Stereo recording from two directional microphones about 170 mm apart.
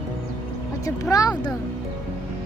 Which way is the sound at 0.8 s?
20° left (ahead or behind).